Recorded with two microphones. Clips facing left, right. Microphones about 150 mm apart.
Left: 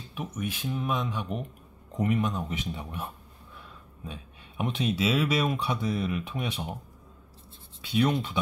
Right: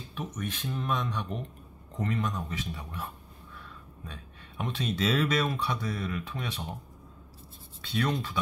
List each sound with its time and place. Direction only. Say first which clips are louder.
0.1 s speech: left 2 dB; 10° left (ahead or behind)
4.1 s speech: left 3 dB; 20° left (ahead or behind)
4.9 s speech: right 1 dB; 5° left (ahead or behind)
7.8 s speech: left 4 dB; 15° left (ahead or behind)